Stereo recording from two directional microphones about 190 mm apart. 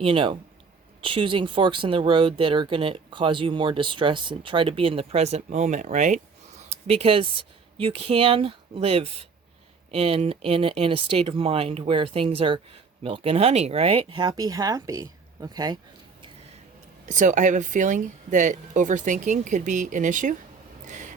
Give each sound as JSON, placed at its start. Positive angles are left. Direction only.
{"t": 0.0, "sound": "speech", "side_deg": -30}
{"t": 17.1, "sound": "speech", "side_deg": -40}
{"t": 20.8, "sound": "a sound", "side_deg": -40}